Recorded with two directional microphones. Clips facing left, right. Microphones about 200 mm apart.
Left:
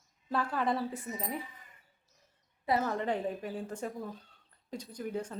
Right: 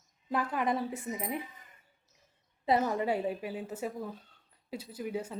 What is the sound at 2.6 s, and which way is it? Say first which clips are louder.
Speech: right 2 dB; 15° right (ahead or behind).